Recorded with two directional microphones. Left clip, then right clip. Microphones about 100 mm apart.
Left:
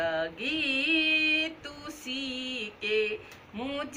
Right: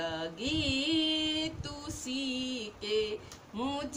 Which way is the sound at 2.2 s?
30° right (ahead or behind).